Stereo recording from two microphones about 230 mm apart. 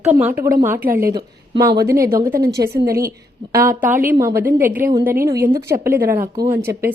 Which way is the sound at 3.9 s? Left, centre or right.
Centre.